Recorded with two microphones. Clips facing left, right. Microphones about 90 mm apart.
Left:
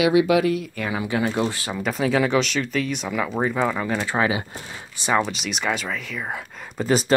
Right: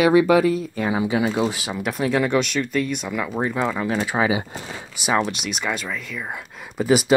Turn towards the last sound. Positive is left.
turn(degrees=-10)  # may be behind; listen again after turning